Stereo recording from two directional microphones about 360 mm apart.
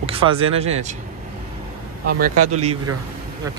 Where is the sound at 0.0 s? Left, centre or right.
Centre.